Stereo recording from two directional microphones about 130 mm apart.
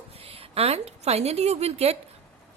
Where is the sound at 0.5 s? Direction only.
55° right (ahead or behind).